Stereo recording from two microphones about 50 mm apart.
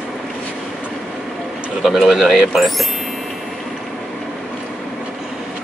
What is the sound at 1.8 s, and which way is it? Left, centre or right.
Speech, centre.